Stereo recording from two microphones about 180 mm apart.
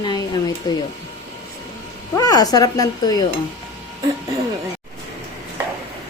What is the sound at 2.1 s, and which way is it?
Speech, 20° left (ahead or behind).